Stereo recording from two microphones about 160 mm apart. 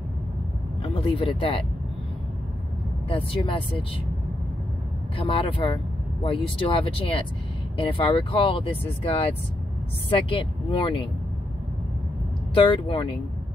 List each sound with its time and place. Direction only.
0.8 s speech: 35° left (ahead or behind)
3.1 s speech: 35° left (ahead or behind)
5.1 s speech: 35° left (ahead or behind)
10.7 s speech: 30° left (ahead or behind)
12.5 s speech: 30° left (ahead or behind)